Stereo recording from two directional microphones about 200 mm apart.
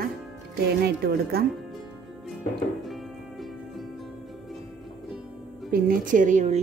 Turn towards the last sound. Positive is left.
turn(degrees=-40)  # may be behind; listen again after turning